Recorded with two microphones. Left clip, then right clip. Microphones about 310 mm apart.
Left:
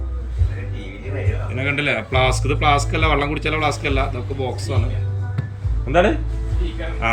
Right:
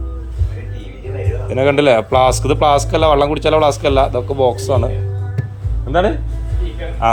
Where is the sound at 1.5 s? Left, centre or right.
Centre.